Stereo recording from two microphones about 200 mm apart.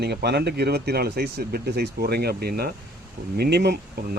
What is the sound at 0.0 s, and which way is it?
Speech, 55° right (ahead or behind).